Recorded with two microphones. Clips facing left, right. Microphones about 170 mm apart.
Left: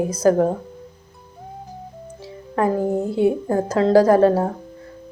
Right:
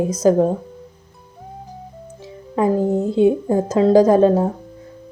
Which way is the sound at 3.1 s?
20° right (ahead or behind).